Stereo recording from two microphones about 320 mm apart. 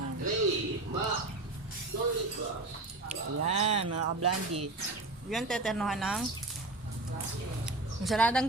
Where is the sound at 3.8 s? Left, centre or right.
Right.